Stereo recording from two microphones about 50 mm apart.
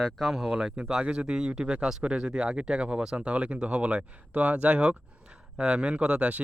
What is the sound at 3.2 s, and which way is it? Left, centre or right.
Speech, right.